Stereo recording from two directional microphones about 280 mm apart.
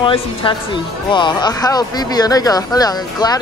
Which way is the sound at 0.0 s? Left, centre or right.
Centre.